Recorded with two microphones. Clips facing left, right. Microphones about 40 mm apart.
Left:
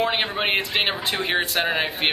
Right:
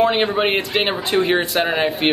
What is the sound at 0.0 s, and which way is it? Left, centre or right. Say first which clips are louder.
Speech: right 6 dB; centre.